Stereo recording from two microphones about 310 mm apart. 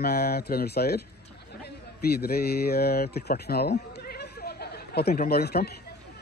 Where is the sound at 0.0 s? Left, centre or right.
Left.